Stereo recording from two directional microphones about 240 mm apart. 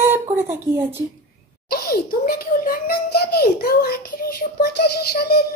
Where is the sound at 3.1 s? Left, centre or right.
Left.